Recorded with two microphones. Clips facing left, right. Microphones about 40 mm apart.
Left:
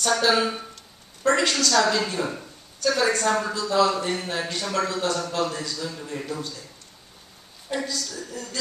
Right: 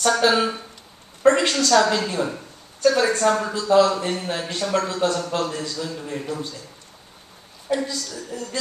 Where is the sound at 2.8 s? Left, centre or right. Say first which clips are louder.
Right 4 dB; right.